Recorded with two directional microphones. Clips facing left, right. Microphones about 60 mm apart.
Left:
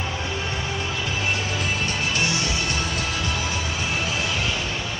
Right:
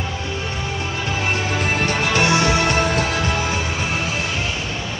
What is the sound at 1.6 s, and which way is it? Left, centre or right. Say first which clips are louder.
Music: right 5 dB; right.